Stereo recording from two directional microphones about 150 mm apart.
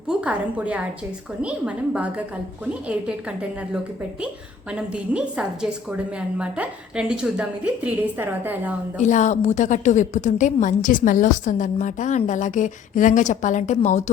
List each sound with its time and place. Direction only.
0.1 s a woman's voice: 10° right (ahead or behind)
4.7 s a woman's voice: 5° right (ahead or behind)
9.0 s a woman's voice: 55° left (ahead or behind)